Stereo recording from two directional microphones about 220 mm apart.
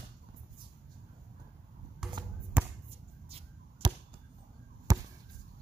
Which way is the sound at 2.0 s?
Centre (ahead or behind).